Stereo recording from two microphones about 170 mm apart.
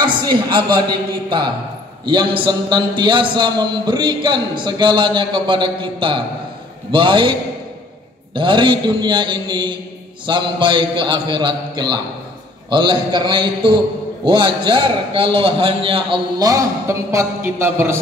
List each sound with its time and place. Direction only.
0.0 s a man's voice: 25° right (ahead or behind)
2.0 s a man's voice: 25° right (ahead or behind)
8.4 s a man's voice: 30° right (ahead or behind)